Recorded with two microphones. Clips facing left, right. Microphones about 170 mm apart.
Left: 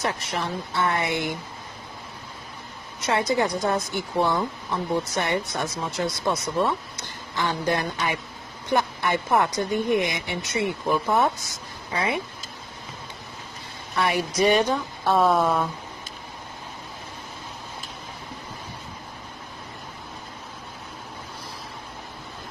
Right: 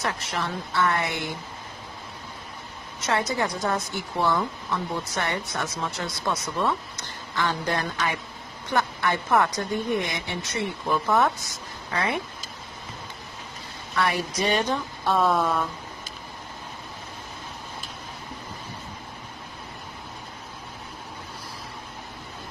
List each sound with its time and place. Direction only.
0.0 s speech: 20° left (ahead or behind)
3.1 s a woman's voice: 20° left (ahead or behind)
13.9 s a woman's voice: 15° left (ahead or behind)